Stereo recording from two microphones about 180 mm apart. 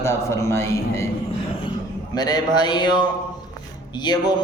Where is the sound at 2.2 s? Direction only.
20° left (ahead or behind).